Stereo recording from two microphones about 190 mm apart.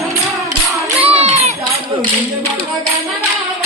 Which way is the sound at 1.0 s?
35° right (ahead or behind).